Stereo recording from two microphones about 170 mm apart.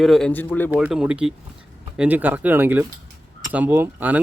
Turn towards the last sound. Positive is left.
turn(degrees=-10)  # may be behind; listen again after turning